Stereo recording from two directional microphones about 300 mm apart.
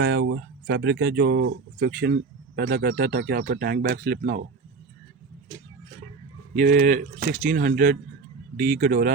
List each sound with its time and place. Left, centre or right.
0.0 s speech: right
6.5 s speech: right